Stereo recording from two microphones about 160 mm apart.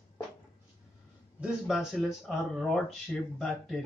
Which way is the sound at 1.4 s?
5° right (ahead or behind).